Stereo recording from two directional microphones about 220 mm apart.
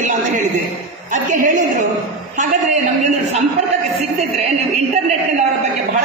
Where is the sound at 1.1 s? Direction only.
35° right (ahead or behind).